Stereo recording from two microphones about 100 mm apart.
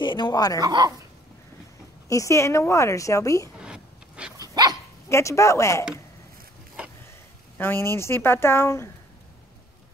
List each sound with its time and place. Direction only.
0.0 s speech: 50° left (ahead or behind)
0.6 s speech: 40° right (ahead or behind)
2.0 s a woman's voice: 30° left (ahead or behind)
3.5 s a sound: 10° right (ahead or behind)
4.4 s dog: 40° right (ahead or behind)
5.1 s a woman's voice: 30° left (ahead or behind)
7.5 s a woman's voice: 20° left (ahead or behind)